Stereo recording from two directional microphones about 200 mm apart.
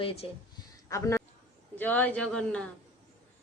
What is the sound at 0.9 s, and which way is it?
A man's voice, 15° left (ahead or behind).